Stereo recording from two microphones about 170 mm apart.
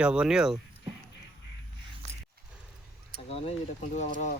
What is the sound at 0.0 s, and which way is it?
Speech, 5° right (ahead or behind).